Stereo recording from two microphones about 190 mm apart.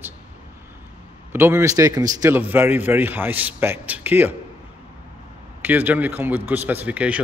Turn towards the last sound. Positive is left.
turn(degrees=-5)  # may be behind; listen again after turning